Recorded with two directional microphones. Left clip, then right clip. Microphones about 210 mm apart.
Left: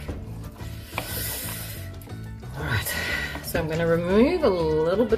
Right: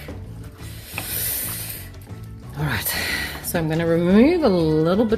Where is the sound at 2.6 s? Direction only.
50° right (ahead or behind).